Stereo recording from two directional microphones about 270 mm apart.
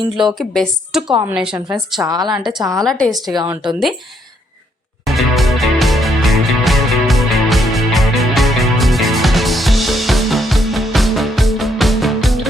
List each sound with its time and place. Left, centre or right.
0.3 s a woman's voice: centre
2.4 s a woman's voice: centre
3.3 s a woman's voice: centre
5.0 s music: centre